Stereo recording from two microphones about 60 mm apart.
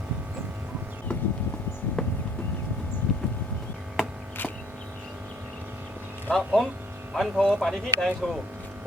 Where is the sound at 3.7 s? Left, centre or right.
Centre.